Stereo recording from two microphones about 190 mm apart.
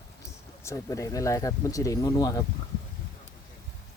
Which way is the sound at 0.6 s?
15° left (ahead or behind).